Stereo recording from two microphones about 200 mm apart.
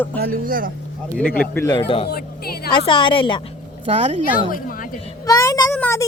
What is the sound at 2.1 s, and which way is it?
Speech, 50° left (ahead or behind).